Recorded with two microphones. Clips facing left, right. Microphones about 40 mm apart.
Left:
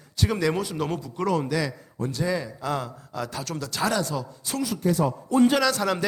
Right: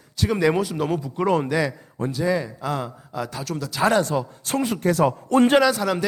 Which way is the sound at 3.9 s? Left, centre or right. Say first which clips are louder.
Right 8 dB; right.